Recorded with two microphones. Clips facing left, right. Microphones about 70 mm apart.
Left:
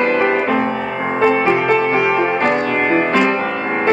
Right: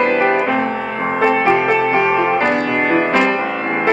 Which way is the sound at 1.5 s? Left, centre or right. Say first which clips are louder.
Even; centre.